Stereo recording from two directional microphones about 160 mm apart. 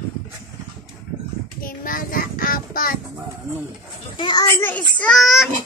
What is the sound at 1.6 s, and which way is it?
Child singing, 60° left (ahead or behind).